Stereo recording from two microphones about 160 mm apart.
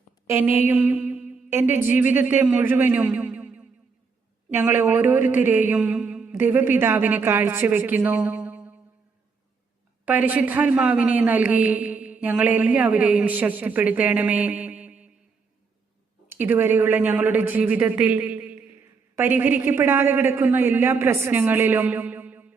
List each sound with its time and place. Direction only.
0.3 s a sound: 15° right (ahead or behind)
4.5 s a man's voice: 15° right (ahead or behind)
10.1 s a man's voice: 10° right (ahead or behind)
16.3 s a man's voice: 15° right (ahead or behind)